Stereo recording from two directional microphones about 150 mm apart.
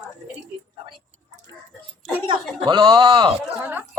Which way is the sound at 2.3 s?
35° right (ahead or behind).